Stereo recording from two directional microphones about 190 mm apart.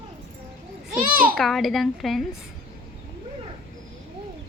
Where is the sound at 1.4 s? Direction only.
Centre (ahead or behind).